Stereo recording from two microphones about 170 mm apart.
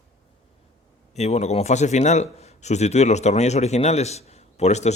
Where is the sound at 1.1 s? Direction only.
40° left (ahead or behind).